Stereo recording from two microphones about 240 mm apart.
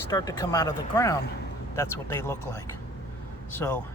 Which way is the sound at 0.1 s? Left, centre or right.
Centre.